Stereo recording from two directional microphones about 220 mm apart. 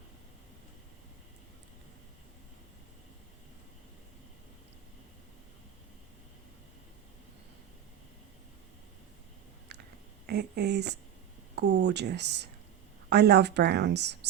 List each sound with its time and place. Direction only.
10.2 s a woman's voice: 45° right (ahead or behind)